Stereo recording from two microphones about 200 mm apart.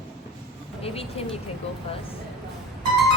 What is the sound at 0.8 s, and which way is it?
Speech, 30° left (ahead or behind).